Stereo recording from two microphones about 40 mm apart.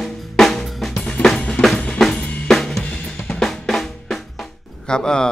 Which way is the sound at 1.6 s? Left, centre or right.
Left.